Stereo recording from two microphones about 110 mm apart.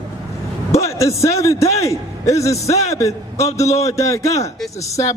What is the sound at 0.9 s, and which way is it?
A man's voice, 30° left (ahead or behind).